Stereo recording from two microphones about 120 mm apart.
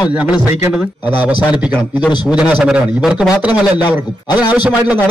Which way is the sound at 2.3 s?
10° right (ahead or behind).